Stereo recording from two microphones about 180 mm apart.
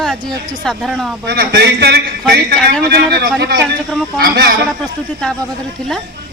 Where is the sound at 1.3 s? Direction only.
65° right (ahead or behind).